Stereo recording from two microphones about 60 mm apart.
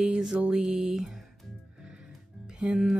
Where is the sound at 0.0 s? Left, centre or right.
Centre.